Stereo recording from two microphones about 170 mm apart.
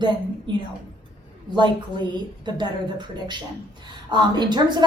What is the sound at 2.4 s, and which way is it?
Speech, 25° right (ahead or behind).